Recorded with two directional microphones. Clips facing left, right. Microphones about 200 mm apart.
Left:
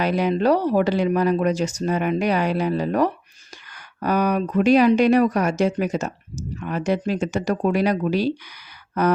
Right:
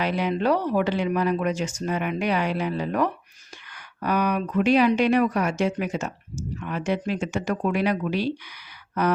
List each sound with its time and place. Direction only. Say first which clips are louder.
0.0 s speech: left 4 dB; 40° left (ahead or behind)